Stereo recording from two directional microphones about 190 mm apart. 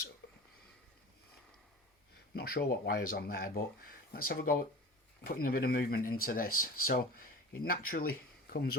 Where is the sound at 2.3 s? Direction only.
55° left (ahead or behind).